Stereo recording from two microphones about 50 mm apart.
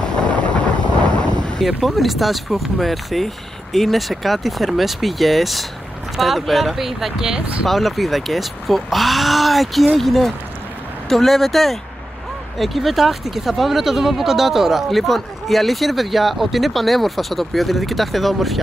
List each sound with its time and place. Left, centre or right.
0.1 s wind noise: left
1.8 s speech: centre
7.6 s speech: centre